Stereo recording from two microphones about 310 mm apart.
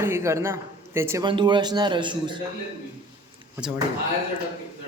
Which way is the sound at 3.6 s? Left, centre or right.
Centre.